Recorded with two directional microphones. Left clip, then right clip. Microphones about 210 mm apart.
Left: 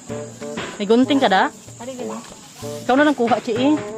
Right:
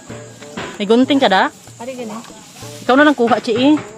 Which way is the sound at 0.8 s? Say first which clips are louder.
Right 3 dB; 5° right (ahead or behind).